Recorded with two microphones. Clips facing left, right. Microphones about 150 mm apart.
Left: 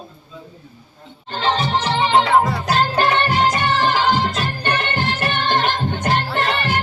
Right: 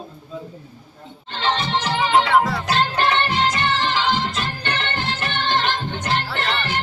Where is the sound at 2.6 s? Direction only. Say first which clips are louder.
Left 2 dB; 40° left (ahead or behind).